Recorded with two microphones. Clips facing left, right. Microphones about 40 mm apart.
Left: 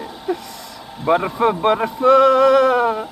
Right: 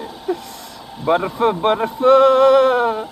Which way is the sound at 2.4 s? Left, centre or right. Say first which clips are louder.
Right 1 dB; right.